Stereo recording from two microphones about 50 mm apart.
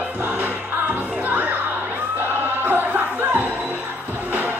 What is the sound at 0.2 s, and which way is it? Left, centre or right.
Music, right.